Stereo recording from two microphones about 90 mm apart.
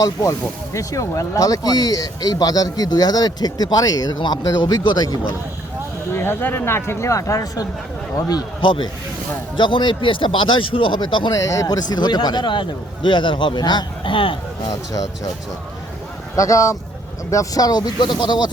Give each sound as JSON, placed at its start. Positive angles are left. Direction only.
{"t": 0.0, "sound": "speech", "side_deg": 35}
{"t": 6.1, "sound": "speech", "side_deg": 25}
{"t": 8.6, "sound": "speech", "side_deg": 70}
{"t": 11.3, "sound": "a man's voice", "side_deg": 35}
{"t": 14.7, "sound": "speech", "side_deg": 40}
{"t": 16.3, "sound": "speech", "side_deg": 35}